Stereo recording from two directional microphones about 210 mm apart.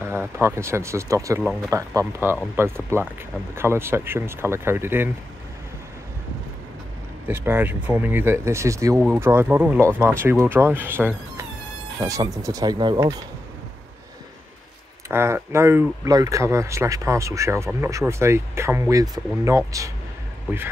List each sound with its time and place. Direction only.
0.0 s speech: 10° right (ahead or behind)
7.2 s speech: 10° right (ahead or behind)
15.0 s speech: 10° right (ahead or behind)